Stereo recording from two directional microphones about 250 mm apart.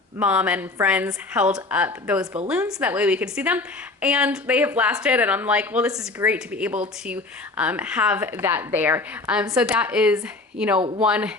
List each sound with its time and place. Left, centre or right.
0.2 s speech: centre
10.8 s speech: centre
11.0 s speech: centre